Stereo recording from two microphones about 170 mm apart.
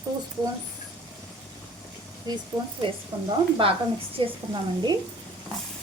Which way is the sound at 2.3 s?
25° right (ahead or behind).